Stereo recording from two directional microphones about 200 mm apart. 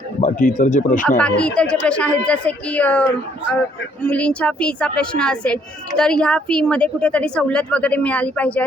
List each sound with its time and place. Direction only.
0.2 s speech: 40° left (ahead or behind)
1.0 s a woman's voice: 5° left (ahead or behind)